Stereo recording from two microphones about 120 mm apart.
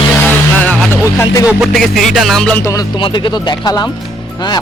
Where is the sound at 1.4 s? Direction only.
10° right (ahead or behind).